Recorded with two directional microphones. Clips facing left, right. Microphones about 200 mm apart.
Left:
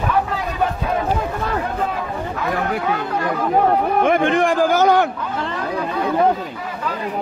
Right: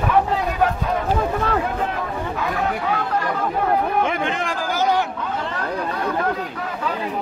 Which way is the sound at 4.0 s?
55° left (ahead or behind).